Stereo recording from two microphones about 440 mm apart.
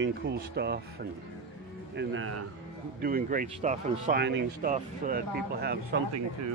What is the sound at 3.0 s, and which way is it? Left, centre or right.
Speech, centre.